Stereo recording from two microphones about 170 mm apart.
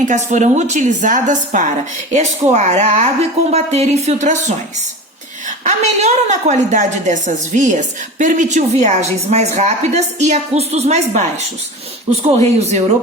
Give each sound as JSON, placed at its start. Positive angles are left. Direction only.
{"t": 0.0, "sound": "a woman's voice", "side_deg": -45}
{"t": 12.5, "sound": "speech", "side_deg": -40}